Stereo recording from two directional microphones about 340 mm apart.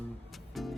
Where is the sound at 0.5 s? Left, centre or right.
Centre.